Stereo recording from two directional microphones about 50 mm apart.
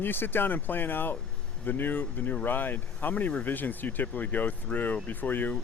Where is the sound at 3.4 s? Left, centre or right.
Left.